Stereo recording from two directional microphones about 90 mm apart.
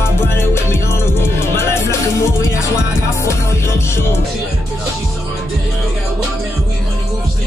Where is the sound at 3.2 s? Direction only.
30° left (ahead or behind).